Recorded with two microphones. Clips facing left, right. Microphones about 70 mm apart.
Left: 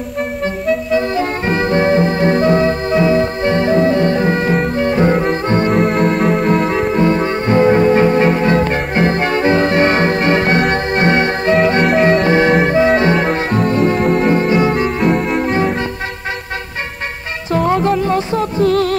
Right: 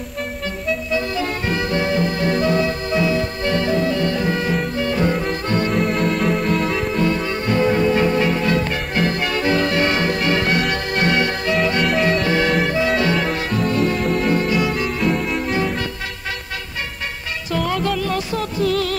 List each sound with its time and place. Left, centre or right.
0.9 s music: left
5.7 s music: left
17.5 s music: left